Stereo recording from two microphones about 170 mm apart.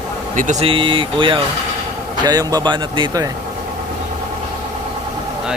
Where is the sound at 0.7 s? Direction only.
30° right (ahead or behind).